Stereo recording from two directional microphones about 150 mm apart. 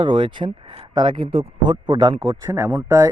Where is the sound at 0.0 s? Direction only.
30° right (ahead or behind).